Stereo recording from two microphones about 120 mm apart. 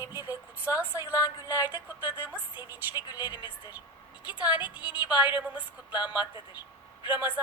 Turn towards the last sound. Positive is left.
turn(degrees=-15)  # may be behind; listen again after turning